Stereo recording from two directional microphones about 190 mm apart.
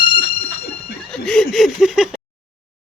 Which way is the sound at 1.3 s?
5° left (ahead or behind).